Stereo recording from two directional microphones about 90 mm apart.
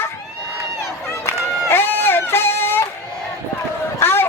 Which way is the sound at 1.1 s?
35° left (ahead or behind).